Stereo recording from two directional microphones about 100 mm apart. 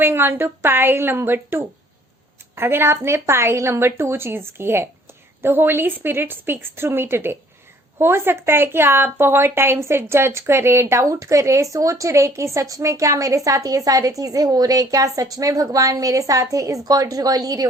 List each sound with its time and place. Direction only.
0.0 s a woman's voice: 20° right (ahead or behind); by 17.7 s 40° right (ahead or behind)